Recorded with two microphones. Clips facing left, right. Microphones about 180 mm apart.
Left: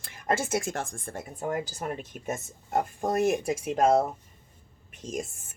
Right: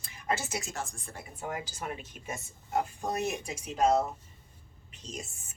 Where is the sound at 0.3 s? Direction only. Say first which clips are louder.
Left 6 dB; 50° left (ahead or behind).